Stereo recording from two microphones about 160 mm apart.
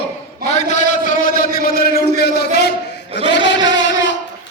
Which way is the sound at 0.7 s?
50° left (ahead or behind).